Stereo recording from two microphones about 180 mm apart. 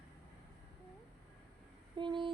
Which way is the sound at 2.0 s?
25° right (ahead or behind).